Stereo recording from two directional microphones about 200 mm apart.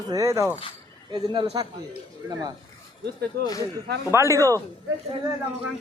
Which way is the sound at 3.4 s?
20° left (ahead or behind).